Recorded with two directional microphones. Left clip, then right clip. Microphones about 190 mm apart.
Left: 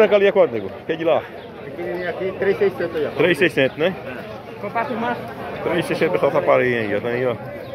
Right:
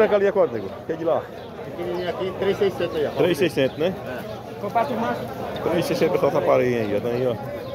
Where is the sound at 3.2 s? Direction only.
Centre (ahead or behind).